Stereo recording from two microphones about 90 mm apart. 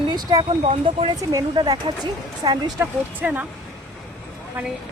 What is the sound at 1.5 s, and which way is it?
Speech, 60° right (ahead or behind).